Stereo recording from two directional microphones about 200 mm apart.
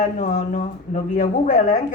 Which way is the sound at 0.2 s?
45° left (ahead or behind).